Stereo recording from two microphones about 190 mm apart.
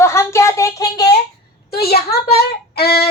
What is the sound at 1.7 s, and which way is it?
A woman's voice, 55° left (ahead or behind).